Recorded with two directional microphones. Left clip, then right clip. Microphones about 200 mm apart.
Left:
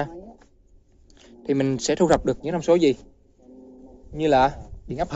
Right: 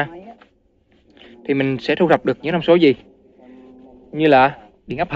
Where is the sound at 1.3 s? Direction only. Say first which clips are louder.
Right 4 dB; 15° left (ahead or behind); by 3.0 s 5° right (ahead or behind).